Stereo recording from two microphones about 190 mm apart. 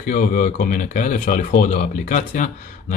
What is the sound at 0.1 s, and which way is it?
Speech, 45° left (ahead or behind).